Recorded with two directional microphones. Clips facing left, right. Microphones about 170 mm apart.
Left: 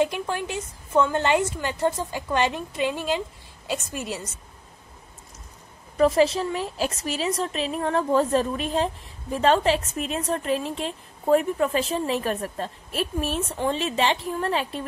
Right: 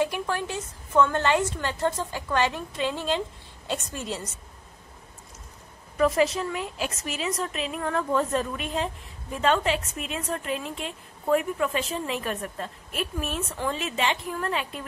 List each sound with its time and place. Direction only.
0.0 s a woman's voice: 20° left (ahead or behind)
5.9 s a woman's voice: 30° left (ahead or behind)